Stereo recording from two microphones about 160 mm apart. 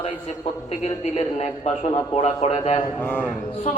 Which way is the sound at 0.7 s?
40° left (ahead or behind).